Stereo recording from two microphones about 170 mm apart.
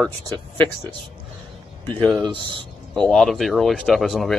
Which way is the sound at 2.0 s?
Centre (ahead or behind).